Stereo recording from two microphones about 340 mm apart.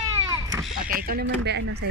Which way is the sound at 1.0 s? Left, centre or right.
Right.